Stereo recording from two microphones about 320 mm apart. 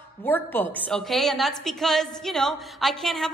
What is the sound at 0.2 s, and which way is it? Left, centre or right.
A woman's voice, centre.